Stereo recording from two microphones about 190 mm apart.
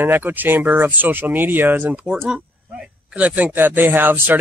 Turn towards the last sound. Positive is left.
turn(degrees=-10)  # may be behind; listen again after turning